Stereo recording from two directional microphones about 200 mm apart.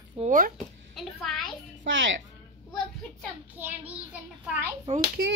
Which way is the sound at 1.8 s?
65° right (ahead or behind).